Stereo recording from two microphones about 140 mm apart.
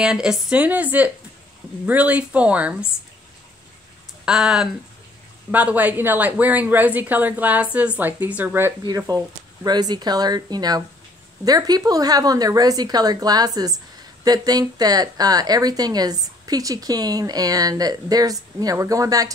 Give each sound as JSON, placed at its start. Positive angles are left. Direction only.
{"t": 0.0, "sound": "speech", "side_deg": -5}
{"t": 4.3, "sound": "speech", "side_deg": -5}
{"t": 8.8, "sound": "a woman's voice", "side_deg": -25}